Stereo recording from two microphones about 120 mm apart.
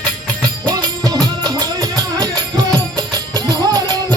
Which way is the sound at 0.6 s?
35° right (ahead or behind).